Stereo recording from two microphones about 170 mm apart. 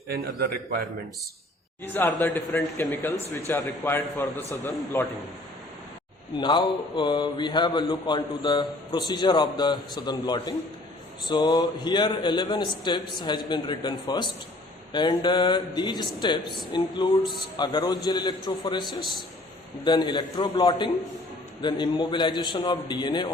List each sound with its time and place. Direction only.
0.1 s a man's voice: 65° right (ahead or behind)
1.8 s a man's voice: 10° left (ahead or behind)
6.3 s a man's voice: 25° left (ahead or behind)